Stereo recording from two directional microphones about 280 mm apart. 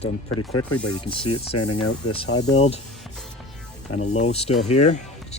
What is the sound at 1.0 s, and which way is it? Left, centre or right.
Speech, centre.